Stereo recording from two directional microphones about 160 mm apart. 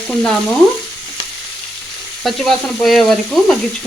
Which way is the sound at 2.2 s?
Centre (ahead or behind).